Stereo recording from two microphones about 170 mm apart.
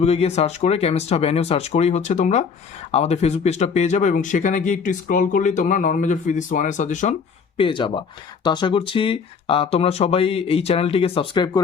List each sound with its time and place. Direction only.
0.0 s speech: 35° left (ahead or behind)
7.5 s speech: 30° left (ahead or behind)